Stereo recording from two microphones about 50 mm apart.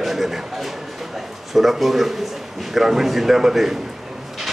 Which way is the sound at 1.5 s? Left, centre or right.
Centre.